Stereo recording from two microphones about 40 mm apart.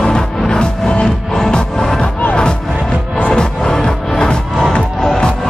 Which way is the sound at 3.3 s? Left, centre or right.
Left.